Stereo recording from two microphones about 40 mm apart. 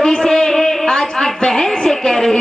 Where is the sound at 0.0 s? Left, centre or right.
Centre.